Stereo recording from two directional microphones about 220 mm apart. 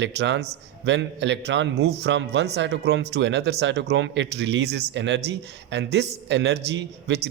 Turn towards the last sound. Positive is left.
turn(degrees=-50)  # may be behind; listen again after turning